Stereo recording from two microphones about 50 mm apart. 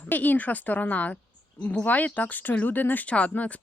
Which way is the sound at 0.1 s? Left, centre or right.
Left.